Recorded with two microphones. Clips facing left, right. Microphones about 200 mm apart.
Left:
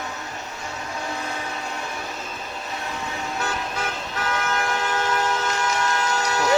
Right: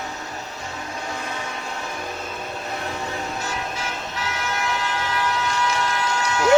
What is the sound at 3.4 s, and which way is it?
Toot, 55° left (ahead or behind).